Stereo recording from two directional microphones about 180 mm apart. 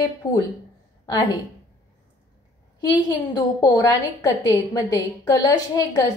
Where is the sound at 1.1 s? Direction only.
20° left (ahead or behind).